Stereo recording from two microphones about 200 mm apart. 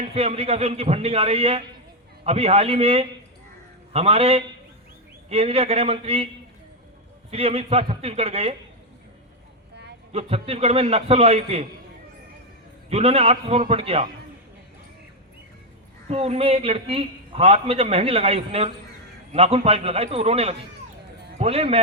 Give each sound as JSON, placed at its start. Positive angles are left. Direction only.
{"t": 0.0, "sound": "a man's voice", "side_deg": -30}
{"t": 7.3, "sound": "a man's voice", "side_deg": -30}
{"t": 10.1, "sound": "a man's voice", "side_deg": -30}
{"t": 12.9, "sound": "a man's voice", "side_deg": -30}
{"t": 16.0, "sound": "a man's voice", "side_deg": -30}